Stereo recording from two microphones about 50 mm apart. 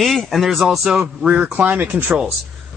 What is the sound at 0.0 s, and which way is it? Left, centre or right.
Speech, centre.